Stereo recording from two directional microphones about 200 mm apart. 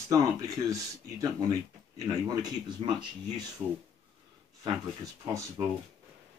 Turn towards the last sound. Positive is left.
turn(degrees=-20)  # may be behind; listen again after turning